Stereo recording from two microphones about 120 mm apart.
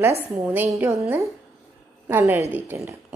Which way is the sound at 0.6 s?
25° right (ahead or behind).